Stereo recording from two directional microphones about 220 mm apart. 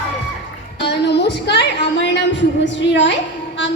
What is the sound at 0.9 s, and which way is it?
A woman's voice, 50° left (ahead or behind).